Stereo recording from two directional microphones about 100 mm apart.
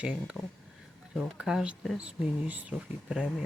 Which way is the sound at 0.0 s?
10° right (ahead or behind).